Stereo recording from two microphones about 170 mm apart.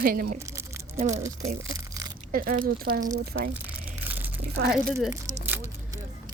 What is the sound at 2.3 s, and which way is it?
Speech, 60° right (ahead or behind).